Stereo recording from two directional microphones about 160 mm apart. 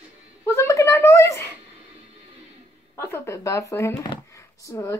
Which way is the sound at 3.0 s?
15° left (ahead or behind).